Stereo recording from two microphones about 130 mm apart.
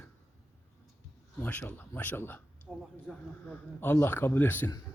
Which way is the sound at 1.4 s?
15° left (ahead or behind).